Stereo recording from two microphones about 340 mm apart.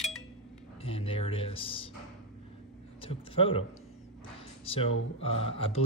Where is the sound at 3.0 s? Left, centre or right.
Centre.